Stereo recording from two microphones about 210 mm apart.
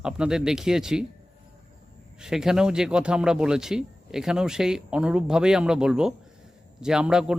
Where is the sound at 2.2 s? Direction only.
Centre (ahead or behind).